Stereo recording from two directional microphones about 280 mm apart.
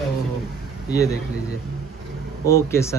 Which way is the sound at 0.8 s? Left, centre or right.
Centre.